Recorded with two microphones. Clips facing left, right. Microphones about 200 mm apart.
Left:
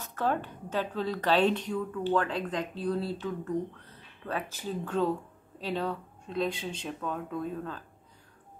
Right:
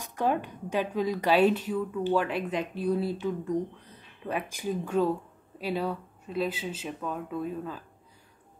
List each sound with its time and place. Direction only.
0.0 s a woman's voice: 15° right (ahead or behind)